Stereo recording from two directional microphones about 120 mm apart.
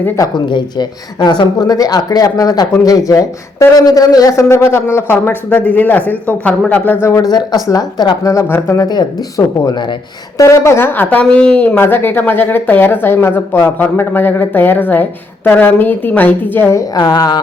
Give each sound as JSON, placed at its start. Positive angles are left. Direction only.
{"t": 0.2, "sound": "speech", "side_deg": 40}
{"t": 9.6, "sound": "speech", "side_deg": 40}
{"t": 10.3, "sound": "speech", "side_deg": 25}
{"t": 17.0, "sound": "speech", "side_deg": 35}